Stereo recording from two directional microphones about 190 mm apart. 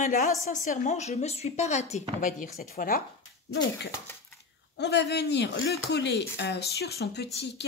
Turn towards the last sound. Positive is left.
turn(degrees=60)  # may be behind; listen again after turning